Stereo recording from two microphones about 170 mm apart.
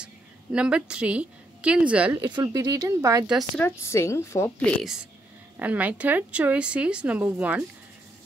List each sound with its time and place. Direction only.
0.0 s a woman's voice: 5° right (ahead or behind)
2.2 s speech: 25° right (ahead or behind)
3.3 s a woman's voice: centre (ahead or behind)
3.6 s a woman's voice: 15° left (ahead or behind)
4.6 s a woman's voice: centre (ahead or behind)